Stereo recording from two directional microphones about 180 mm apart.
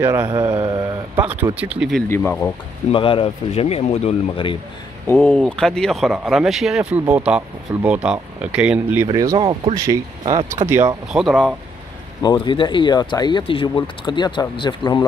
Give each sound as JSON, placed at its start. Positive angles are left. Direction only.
{"t": 0.0, "sound": "speech", "side_deg": -15}
{"t": 1.2, "sound": "speech", "side_deg": -10}
{"t": 2.0, "sound": "speech", "side_deg": 15}
{"t": 2.9, "sound": "speech", "side_deg": 30}
{"t": 5.0, "sound": "speech", "side_deg": 10}
{"t": 9.1, "sound": "speech", "side_deg": -20}
{"t": 11.1, "sound": "speech", "side_deg": 0}
{"t": 12.2, "sound": "speech", "side_deg": 25}